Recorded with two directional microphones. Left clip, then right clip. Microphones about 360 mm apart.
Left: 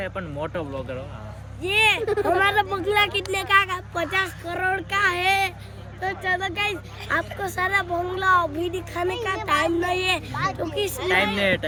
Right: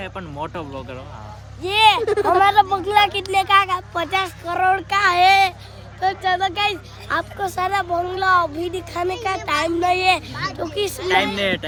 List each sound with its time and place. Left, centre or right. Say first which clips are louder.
0.0 s speech: even; centre
2.0 s speech: right 5 dB; right
2.4 s speech: right 6 dB; centre